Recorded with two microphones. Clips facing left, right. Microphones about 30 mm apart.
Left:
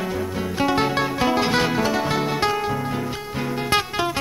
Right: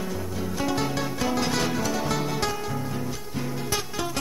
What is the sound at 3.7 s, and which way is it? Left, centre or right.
Music, left.